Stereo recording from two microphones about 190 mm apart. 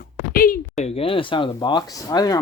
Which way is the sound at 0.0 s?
50° left (ahead or behind).